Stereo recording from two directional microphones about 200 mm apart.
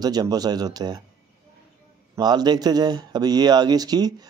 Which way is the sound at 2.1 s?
20° right (ahead or behind).